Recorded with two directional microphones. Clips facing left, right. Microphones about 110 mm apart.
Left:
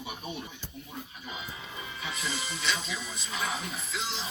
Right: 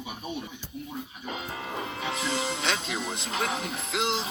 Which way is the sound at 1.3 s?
70° right (ahead or behind).